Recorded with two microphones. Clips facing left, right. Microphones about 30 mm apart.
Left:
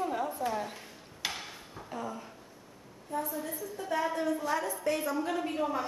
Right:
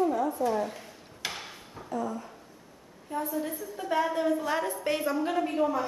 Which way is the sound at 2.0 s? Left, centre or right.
Centre.